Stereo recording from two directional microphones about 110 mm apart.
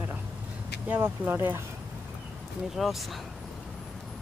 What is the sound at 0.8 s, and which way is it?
Speech, 20° right (ahead or behind).